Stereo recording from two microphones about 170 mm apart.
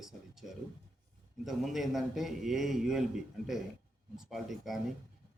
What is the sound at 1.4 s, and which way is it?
A man's voice, centre (ahead or behind).